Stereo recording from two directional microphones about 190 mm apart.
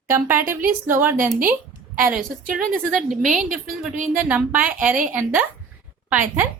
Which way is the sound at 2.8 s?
Centre (ahead or behind).